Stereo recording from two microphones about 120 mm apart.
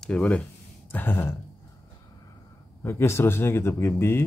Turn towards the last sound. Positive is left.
turn(degrees=20)  # may be behind; listen again after turning